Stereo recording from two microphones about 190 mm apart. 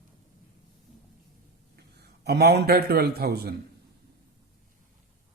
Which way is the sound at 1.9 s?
55° right (ahead or behind).